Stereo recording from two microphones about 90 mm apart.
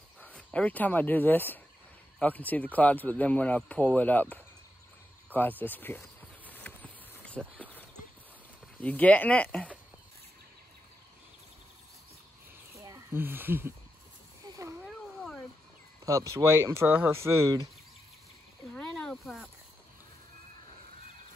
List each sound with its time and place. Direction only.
0.2 s speech: 10° left (ahead or behind)
5.3 s a sound: 20° left (ahead or behind)
8.8 s speech: 15° left (ahead or behind)
12.7 s snake: 45° right (ahead or behind)
13.1 s speech: 25° right (ahead or behind)
16.1 s speech: 35° right (ahead or behind)
18.7 s a sound: 10° left (ahead or behind)